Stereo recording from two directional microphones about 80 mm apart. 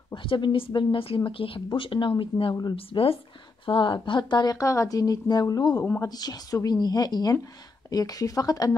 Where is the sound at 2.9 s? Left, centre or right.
Left.